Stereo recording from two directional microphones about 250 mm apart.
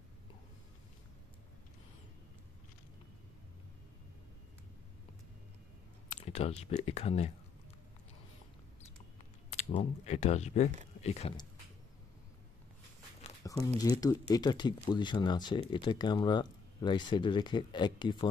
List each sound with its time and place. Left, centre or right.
6.0 s speech: left
9.5 s speech: left
13.4 s a sound: centre
13.7 s speech: centre